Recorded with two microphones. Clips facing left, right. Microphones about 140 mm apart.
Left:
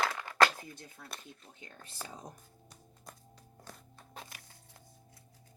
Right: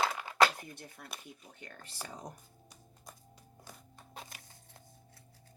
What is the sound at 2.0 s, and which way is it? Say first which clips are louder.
Speech: right 2 dB; 70° right (ahead or behind).